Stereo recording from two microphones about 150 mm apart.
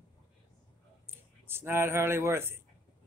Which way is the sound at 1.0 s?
15° right (ahead or behind).